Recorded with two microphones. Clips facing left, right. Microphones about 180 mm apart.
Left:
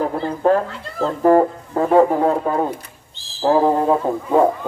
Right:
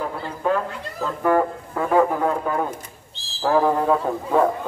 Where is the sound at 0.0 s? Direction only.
40° left (ahead or behind).